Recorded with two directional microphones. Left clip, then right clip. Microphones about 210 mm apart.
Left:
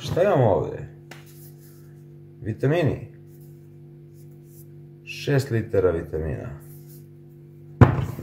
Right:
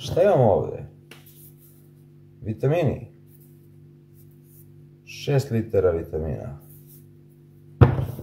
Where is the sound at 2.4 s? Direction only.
Centre (ahead or behind).